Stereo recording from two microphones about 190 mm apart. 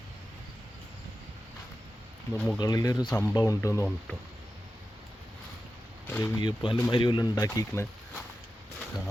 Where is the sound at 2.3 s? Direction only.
5° left (ahead or behind).